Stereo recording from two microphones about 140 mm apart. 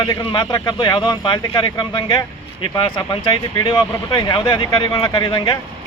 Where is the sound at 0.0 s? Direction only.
35° left (ahead or behind).